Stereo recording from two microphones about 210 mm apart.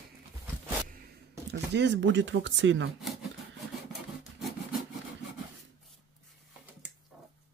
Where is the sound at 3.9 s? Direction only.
Centre (ahead or behind).